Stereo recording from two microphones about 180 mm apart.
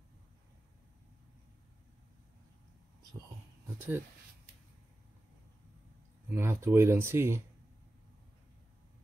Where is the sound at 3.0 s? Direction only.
20° right (ahead or behind).